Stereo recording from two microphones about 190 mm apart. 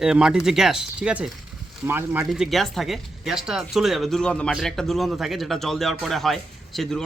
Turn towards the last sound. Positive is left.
turn(degrees=0)  # may be behind; listen again after turning